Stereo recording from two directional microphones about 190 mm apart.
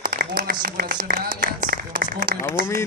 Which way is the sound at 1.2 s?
50° right (ahead or behind).